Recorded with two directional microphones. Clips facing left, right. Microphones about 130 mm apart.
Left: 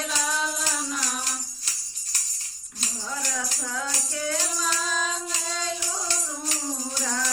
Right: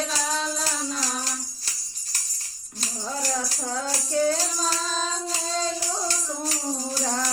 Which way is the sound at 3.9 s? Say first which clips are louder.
Right 12 dB; 35° right (ahead or behind).